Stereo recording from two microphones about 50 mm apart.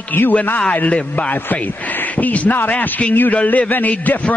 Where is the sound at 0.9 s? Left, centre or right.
Left.